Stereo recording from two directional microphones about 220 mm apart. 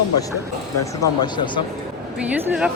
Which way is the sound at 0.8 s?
15° left (ahead or behind).